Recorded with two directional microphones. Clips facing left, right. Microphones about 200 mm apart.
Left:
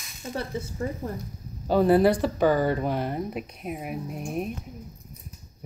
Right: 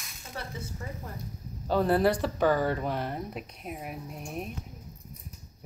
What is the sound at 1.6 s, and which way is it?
Speech, 10° left (ahead or behind).